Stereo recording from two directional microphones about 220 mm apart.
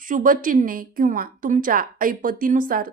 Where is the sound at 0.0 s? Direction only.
40° right (ahead or behind).